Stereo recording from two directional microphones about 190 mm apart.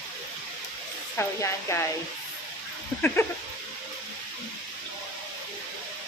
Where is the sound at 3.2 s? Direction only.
15° left (ahead or behind).